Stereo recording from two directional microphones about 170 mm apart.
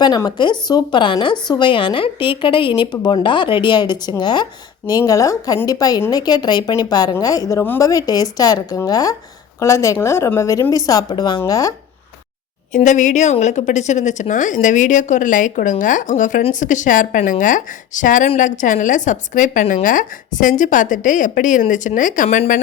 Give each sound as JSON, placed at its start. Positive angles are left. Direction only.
{"t": 0.0, "sound": "a woman's voice", "side_deg": 25}
{"t": 12.7, "sound": "a woman's voice", "side_deg": 45}